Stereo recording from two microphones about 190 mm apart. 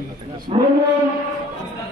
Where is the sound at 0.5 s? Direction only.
30° right (ahead or behind).